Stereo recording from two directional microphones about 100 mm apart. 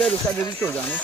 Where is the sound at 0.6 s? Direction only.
20° left (ahead or behind).